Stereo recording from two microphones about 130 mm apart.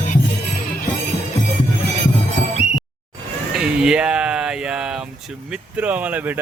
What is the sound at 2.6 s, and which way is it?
Music, 5° right (ahead or behind).